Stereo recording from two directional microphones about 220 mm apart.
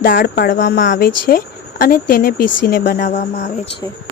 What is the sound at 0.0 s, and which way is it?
Speech, 40° left (ahead or behind).